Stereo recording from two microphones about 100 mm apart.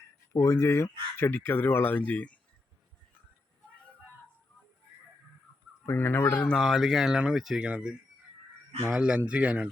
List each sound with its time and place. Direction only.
0.3 s speech: 25° left (ahead or behind)
5.8 s speech: 20° left (ahead or behind)
6.5 s speech: centre (ahead or behind)